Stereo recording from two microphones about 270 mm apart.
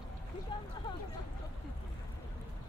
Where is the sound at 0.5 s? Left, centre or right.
Centre.